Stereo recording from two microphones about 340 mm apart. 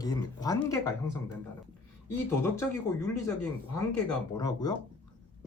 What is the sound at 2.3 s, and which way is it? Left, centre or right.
Speech, centre.